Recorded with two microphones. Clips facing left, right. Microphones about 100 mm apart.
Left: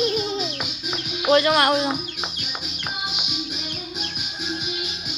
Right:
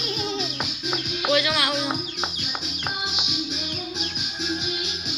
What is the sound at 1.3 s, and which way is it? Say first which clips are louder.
Speech: left 7 dB; 45° left (ahead or behind).